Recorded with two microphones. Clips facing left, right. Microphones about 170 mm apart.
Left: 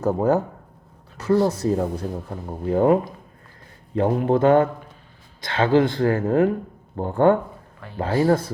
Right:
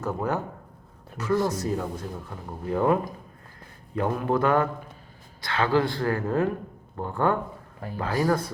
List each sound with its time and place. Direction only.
0.0 s speech: 35° left (ahead or behind)
7.8 s speech: 40° right (ahead or behind)